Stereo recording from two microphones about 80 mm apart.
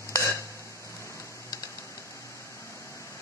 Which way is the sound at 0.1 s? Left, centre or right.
Left.